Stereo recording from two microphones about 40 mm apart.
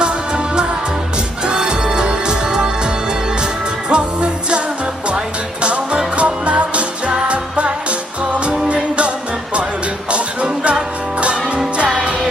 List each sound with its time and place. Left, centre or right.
1.5 s music: right
3.8 s music: right
5.6 s music: right